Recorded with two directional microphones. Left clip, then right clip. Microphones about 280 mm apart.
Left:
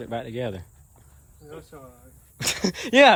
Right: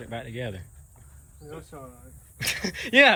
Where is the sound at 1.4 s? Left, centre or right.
Centre.